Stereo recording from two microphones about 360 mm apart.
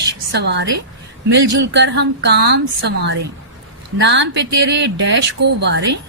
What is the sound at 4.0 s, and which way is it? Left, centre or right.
A woman's voice, right.